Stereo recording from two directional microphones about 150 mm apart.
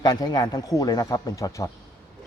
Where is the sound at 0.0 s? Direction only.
25° left (ahead or behind).